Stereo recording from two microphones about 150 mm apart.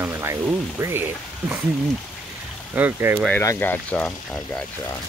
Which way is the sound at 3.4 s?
10° left (ahead or behind).